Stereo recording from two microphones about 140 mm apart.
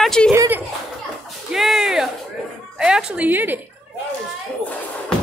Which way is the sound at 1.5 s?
Centre (ahead or behind).